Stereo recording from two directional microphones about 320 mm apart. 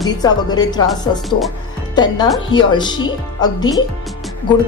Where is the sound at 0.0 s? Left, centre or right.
Centre.